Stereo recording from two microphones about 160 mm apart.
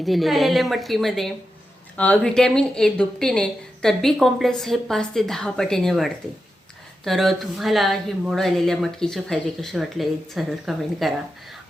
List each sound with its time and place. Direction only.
0.0 s speech: centre (ahead or behind)